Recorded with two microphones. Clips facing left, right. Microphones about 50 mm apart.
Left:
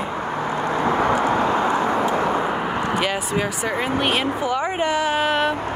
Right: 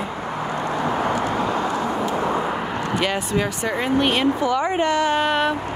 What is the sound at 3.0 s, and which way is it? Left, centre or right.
Speech, centre.